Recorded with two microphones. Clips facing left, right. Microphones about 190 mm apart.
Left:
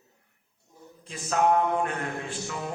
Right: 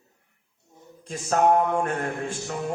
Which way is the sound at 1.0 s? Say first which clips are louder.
Right 3 dB; 45° right (ahead or behind).